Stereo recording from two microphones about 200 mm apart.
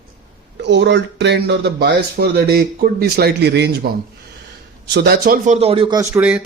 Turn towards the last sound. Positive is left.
turn(degrees=-5)  # may be behind; listen again after turning